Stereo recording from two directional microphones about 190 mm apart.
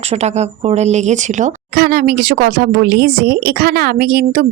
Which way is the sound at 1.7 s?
50° right (ahead or behind).